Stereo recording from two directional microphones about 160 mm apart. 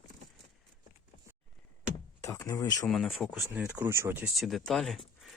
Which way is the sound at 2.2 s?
20° left (ahead or behind).